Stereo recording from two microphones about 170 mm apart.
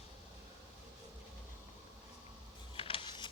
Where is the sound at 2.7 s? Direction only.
30° left (ahead or behind).